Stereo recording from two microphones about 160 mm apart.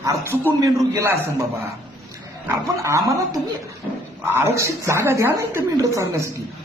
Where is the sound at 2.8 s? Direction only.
20° right (ahead or behind).